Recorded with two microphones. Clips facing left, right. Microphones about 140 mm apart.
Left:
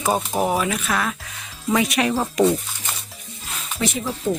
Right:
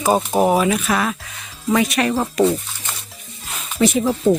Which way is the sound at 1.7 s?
10° left (ahead or behind).